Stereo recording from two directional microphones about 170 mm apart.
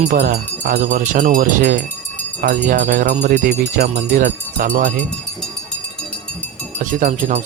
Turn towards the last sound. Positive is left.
turn(degrees=-45)  # may be behind; listen again after turning